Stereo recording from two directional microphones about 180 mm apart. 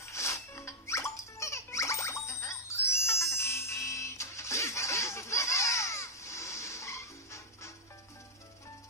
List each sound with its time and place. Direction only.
0.0 s music: 15° left (ahead or behind)